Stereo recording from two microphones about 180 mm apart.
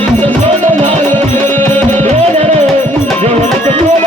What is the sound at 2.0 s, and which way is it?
Music, 35° right (ahead or behind).